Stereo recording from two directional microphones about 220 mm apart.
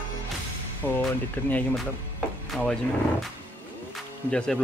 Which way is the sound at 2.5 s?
Centre (ahead or behind).